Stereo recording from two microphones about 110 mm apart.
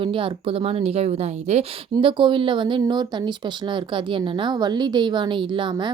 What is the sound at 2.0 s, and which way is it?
A woman's voice, 50° right (ahead or behind).